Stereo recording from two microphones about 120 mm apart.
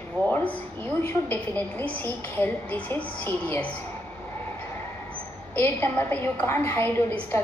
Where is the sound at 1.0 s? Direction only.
20° left (ahead or behind).